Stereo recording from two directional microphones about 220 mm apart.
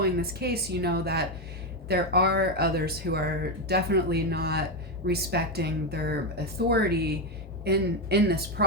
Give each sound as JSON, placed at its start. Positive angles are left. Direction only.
{"t": 0.0, "sound": "speech", "side_deg": -45}